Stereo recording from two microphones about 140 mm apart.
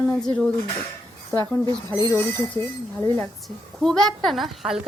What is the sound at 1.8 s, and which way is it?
Speech, 30° right (ahead or behind).